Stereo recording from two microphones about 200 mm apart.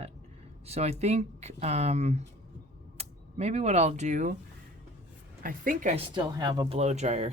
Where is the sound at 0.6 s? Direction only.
30° right (ahead or behind).